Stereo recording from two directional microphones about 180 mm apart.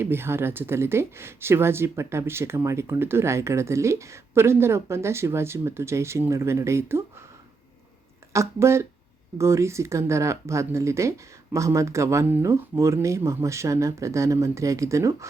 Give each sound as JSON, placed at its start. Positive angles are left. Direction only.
{"t": 0.0, "sound": "speech", "side_deg": -15}
{"t": 8.3, "sound": "speech", "side_deg": -15}